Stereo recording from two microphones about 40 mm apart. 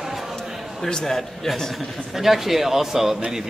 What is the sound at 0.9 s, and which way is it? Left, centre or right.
Speech, centre.